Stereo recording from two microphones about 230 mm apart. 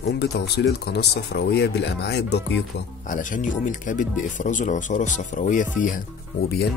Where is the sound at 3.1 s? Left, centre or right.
Left.